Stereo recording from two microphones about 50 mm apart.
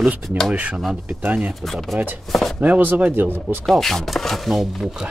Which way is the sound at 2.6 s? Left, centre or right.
Right.